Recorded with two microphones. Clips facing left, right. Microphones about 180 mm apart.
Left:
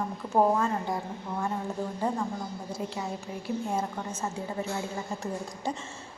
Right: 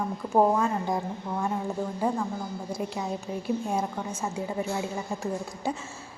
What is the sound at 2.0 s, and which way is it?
A woman's voice, 10° right (ahead or behind).